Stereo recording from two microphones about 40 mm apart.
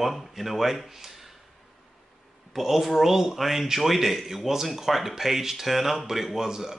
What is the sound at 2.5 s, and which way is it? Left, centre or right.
Speech, centre.